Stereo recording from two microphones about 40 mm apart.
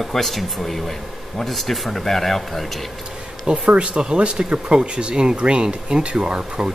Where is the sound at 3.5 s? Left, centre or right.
Right.